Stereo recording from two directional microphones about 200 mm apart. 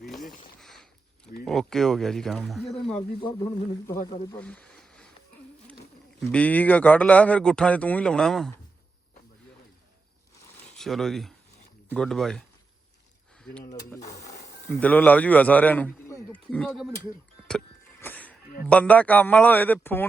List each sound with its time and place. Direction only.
0.0 s a sound: centre (ahead or behind)
1.5 s speech: centre (ahead or behind)
2.9 s speech: 20° left (ahead or behind)
4.4 s a sound: 5° left (ahead or behind)
6.2 s speech: 5° left (ahead or behind)
10.8 s speech: centre (ahead or behind)
13.4 s speech: 5° left (ahead or behind)
14.7 s a man's voice: 5° left (ahead or behind)
18.0 s a man's voice: 10° left (ahead or behind)